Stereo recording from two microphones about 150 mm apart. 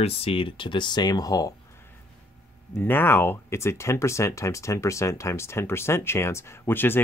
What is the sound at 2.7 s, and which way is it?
Speech, 15° left (ahead or behind).